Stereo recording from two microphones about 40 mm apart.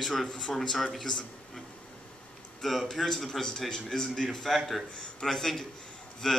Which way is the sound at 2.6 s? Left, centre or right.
Centre.